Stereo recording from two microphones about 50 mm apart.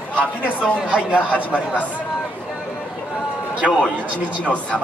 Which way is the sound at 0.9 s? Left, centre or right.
Right.